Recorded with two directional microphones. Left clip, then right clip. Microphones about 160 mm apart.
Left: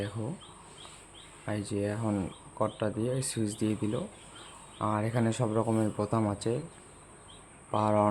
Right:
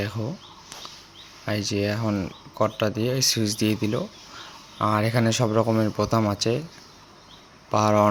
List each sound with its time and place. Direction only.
1.5 s speech: 20° right (ahead or behind)
7.7 s speech: 20° right (ahead or behind)